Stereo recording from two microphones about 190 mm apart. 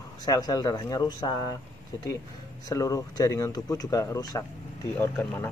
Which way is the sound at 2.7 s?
20° left (ahead or behind).